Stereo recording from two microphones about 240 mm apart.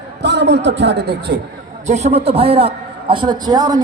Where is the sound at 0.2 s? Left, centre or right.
Right.